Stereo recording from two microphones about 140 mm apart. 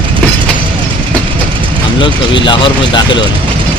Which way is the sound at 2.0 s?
35° left (ahead or behind).